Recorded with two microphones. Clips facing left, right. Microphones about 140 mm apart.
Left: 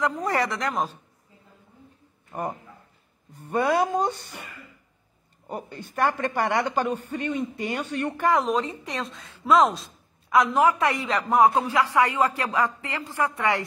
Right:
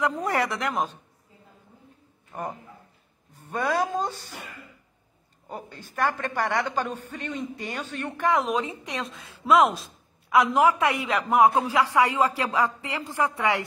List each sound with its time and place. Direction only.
0.2 s a woman's voice: centre (ahead or behind)
3.3 s a man's voice: 10° left (ahead or behind)
4.0 s speech: 60° left (ahead or behind)
5.7 s speech: 55° left (ahead or behind)
5.9 s a man's voice: 10° left (ahead or behind)
8.2 s a woman's voice: centre (ahead or behind)
10.3 s speech: 10° right (ahead or behind)
10.8 s a woman's voice: centre (ahead or behind)
11.5 s speech: 15° right (ahead or behind)